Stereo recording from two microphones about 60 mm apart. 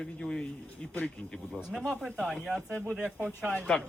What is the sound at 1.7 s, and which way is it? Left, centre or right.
Speech, centre.